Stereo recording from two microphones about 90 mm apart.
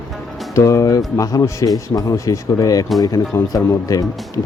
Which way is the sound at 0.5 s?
35° left (ahead or behind).